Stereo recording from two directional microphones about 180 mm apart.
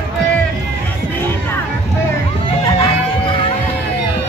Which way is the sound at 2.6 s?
20° left (ahead or behind).